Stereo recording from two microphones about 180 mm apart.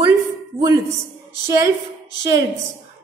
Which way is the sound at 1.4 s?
15° right (ahead or behind).